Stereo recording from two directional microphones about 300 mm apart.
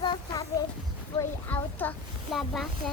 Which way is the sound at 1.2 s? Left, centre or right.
Centre.